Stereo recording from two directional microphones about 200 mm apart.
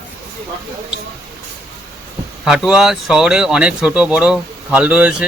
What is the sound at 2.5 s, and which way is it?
Speech, 5° right (ahead or behind).